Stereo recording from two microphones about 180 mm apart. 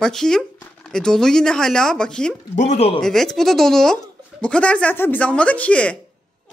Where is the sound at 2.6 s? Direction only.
40° left (ahead or behind).